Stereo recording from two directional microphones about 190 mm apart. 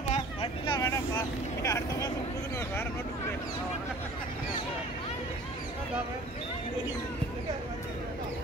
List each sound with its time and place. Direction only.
0.1 s vehicle: 30° left (ahead or behind)
0.7 s vehicle: 15° left (ahead or behind)